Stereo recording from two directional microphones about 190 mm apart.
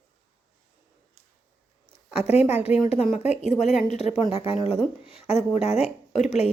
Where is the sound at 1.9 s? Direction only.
55° left (ahead or behind).